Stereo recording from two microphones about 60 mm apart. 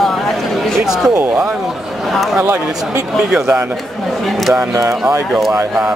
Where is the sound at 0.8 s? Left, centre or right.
Centre.